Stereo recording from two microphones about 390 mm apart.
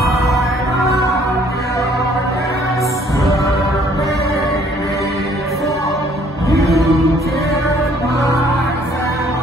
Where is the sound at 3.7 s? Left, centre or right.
Centre.